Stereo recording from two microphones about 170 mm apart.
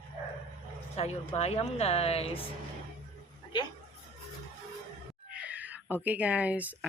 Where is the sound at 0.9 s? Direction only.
40° left (ahead or behind).